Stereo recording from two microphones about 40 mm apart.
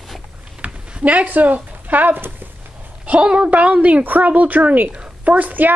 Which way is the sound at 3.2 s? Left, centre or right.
Right.